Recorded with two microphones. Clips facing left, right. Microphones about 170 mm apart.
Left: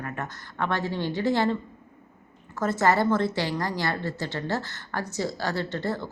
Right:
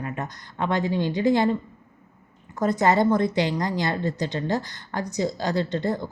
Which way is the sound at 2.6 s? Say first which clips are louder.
Right 3 dB; 15° right (ahead or behind).